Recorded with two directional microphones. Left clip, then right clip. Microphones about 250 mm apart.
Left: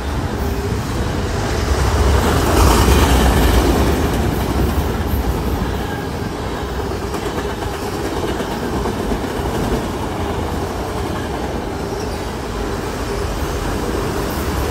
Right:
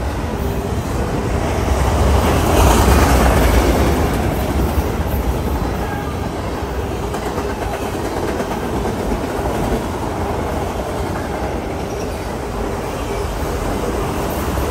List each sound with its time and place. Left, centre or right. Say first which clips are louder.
2.7 s vehicle: right 1 dB; centre
3.5 s train: even; centre